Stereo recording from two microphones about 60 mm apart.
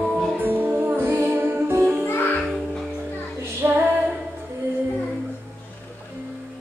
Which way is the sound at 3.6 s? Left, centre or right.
Right.